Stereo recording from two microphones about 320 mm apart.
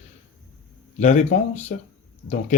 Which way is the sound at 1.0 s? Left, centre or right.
Left.